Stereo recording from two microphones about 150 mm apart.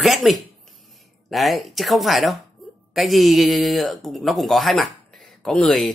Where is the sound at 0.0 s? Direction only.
Centre (ahead or behind).